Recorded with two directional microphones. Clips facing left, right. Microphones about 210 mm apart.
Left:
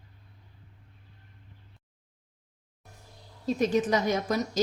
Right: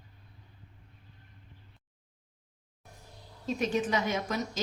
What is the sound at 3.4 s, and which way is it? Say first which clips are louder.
Speech: left 5 dB; 40° left (ahead or behind).